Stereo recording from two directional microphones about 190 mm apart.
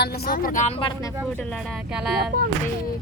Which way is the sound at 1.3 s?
5° left (ahead or behind).